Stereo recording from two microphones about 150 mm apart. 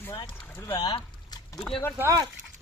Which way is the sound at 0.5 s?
15° left (ahead or behind).